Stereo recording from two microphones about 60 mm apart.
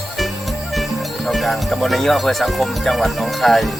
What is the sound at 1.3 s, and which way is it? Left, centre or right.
Speech, centre.